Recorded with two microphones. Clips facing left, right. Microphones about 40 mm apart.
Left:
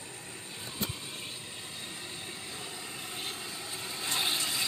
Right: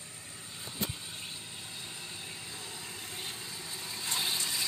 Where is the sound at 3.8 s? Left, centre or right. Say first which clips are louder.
Left 3 dB; left.